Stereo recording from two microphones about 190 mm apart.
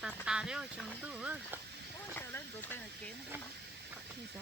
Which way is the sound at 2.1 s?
10° left (ahead or behind).